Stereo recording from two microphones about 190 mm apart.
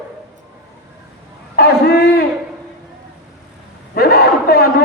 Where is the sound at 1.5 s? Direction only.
55° left (ahead or behind).